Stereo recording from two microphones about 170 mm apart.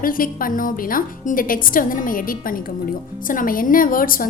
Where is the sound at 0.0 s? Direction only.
55° left (ahead or behind).